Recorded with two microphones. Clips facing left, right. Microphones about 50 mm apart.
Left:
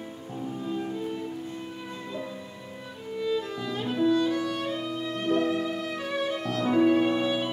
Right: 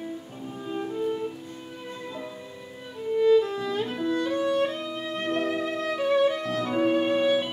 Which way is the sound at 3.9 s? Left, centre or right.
Right.